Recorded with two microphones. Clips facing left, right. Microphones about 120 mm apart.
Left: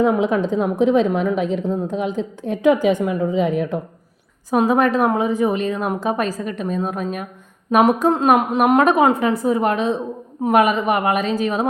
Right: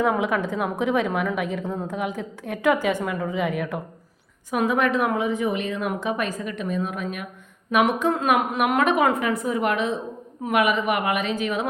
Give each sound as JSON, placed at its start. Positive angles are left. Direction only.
{"t": 0.0, "sound": "a woman's voice", "side_deg": 20}